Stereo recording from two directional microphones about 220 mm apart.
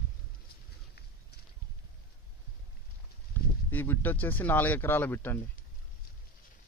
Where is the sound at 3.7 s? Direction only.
10° left (ahead or behind).